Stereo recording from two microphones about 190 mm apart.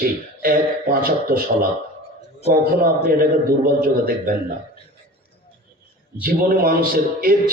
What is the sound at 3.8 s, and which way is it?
Speech, 50° right (ahead or behind).